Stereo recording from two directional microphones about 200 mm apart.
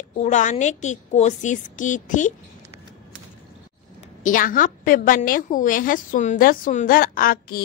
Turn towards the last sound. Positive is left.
turn(degrees=45)  # may be behind; listen again after turning